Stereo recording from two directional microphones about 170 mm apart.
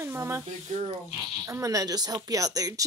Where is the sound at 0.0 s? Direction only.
15° right (ahead or behind).